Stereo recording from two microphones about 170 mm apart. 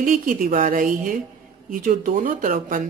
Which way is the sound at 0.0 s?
55° right (ahead or behind).